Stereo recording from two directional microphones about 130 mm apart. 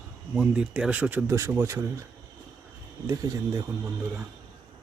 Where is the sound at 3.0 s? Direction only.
25° right (ahead or behind).